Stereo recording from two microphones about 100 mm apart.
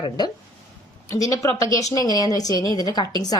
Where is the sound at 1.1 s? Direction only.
35° left (ahead or behind).